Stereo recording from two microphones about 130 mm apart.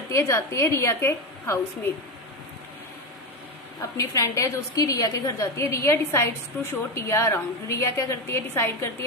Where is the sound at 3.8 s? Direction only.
25° left (ahead or behind).